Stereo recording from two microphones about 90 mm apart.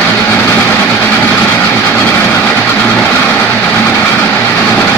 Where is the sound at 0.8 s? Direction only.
15° left (ahead or behind).